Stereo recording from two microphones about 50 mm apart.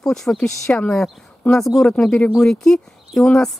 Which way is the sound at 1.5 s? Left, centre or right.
Centre.